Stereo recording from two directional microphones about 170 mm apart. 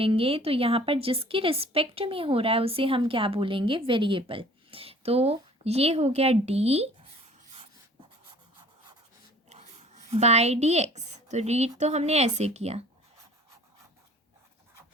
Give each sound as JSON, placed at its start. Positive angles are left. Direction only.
{"t": 0.0, "sound": "a woman's voice", "side_deg": -35}
{"t": 9.5, "sound": "a sound", "side_deg": -40}
{"t": 11.8, "sound": "a woman's voice", "side_deg": -40}